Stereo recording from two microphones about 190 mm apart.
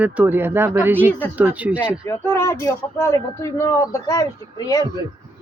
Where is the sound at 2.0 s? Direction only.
15° left (ahead or behind).